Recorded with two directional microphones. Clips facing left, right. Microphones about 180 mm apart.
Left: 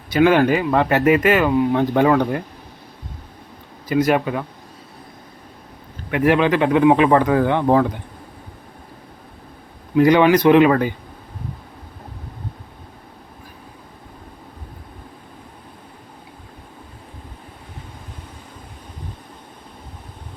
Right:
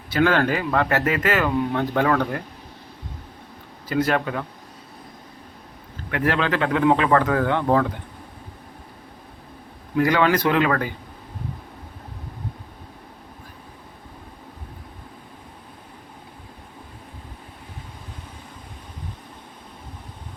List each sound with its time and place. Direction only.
0.1 s speech: 15° left (ahead or behind)
3.8 s speech: 15° left (ahead or behind)
6.1 s speech: 15° left (ahead or behind)
9.9 s speech: 20° left (ahead or behind)